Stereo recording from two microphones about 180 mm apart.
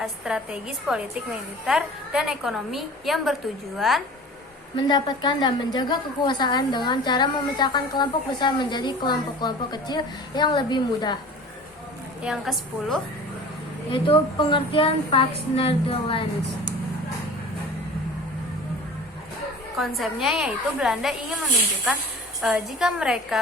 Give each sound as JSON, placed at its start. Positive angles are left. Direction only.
{"t": 0.0, "sound": "a woman's voice", "side_deg": -5}
{"t": 4.8, "sound": "a woman's voice", "side_deg": 25}
{"t": 12.2, "sound": "a woman's voice", "side_deg": 0}
{"t": 13.9, "sound": "a woman's voice", "side_deg": 30}
{"t": 19.8, "sound": "a woman's voice", "side_deg": 0}
{"t": 22.4, "sound": "a woman's voice", "side_deg": -5}